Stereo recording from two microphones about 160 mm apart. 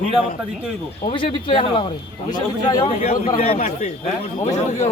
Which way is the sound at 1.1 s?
30° left (ahead or behind).